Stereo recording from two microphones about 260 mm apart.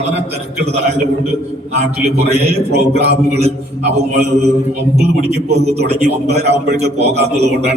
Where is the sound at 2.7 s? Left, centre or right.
Right.